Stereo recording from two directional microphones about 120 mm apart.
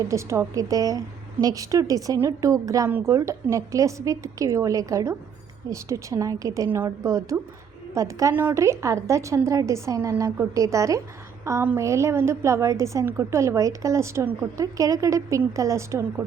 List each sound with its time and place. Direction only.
0.1 s a woman's voice: 25° right (ahead or behind)